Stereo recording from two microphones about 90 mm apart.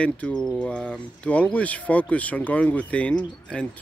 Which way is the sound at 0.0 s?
10° left (ahead or behind).